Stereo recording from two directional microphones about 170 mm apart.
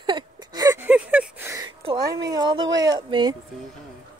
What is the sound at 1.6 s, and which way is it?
A woman's voice, 25° right (ahead or behind).